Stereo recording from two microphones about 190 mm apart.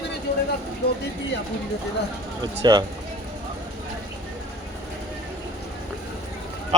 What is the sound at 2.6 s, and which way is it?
Speech, 20° right (ahead or behind).